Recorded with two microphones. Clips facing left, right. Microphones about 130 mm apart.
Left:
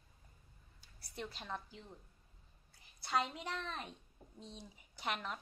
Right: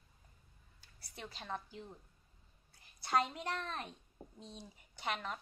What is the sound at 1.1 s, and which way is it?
Speech, centre (ahead or behind).